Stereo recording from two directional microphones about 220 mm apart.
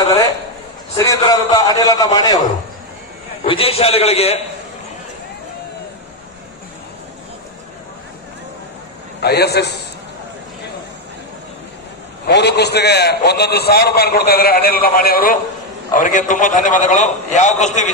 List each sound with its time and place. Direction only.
0.9 s a man's voice: 15° left (ahead or behind)
3.4 s a man's voice: 25° left (ahead or behind)
9.2 s a man's voice: 45° left (ahead or behind)
12.3 s a man's voice: 50° left (ahead or behind); by 17.9 s 35° left (ahead or behind)